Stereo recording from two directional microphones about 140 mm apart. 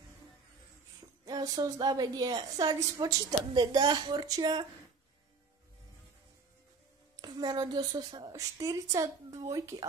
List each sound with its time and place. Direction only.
1.2 s a woman's voice: 25° right (ahead or behind)
7.2 s a woman's voice: 30° right (ahead or behind)